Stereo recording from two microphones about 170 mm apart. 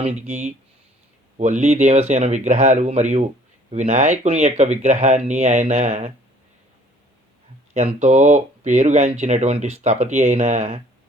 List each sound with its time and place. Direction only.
0.0 s speech: 40° right (ahead or behind)
7.7 s speech: 45° right (ahead or behind)